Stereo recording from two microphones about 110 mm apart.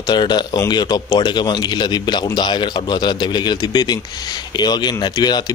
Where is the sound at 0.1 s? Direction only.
40° left (ahead or behind).